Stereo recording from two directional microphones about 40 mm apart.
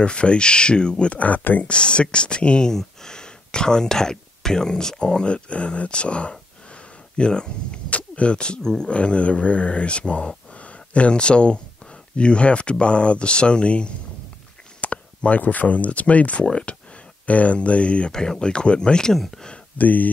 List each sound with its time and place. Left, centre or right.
0.0 s speech: left
1.2 s speech: left
1.7 s speech: left
2.7 s speech: centre; by 16.4 s left
16.4 s speech: left
18.1 s speech: centre
19.8 s speech: left